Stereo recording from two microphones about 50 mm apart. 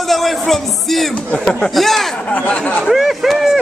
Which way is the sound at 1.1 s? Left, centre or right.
Left.